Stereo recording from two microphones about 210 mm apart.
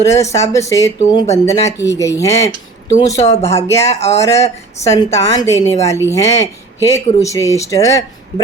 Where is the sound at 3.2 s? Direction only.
30° left (ahead or behind).